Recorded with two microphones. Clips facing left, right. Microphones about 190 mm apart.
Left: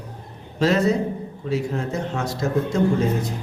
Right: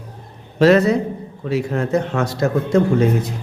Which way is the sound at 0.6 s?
70° right (ahead or behind).